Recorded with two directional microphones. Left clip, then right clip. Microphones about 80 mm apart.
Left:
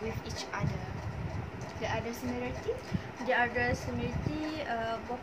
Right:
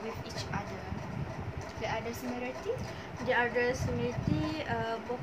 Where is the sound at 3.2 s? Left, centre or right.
Right.